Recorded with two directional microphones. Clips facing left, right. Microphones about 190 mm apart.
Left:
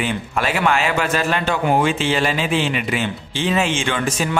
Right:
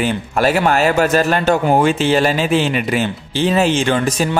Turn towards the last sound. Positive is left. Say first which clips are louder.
# right 5 dB
turn(degrees=-40)  # may be behind; listen again after turning